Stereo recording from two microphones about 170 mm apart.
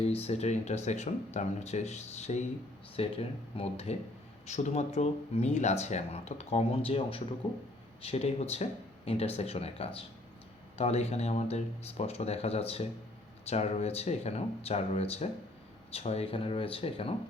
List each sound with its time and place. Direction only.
0.0 s speech: 40° left (ahead or behind)